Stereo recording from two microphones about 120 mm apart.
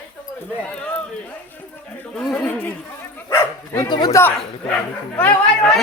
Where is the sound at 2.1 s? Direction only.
10° left (ahead or behind).